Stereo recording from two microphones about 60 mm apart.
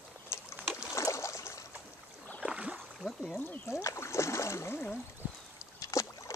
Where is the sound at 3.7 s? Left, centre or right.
Left.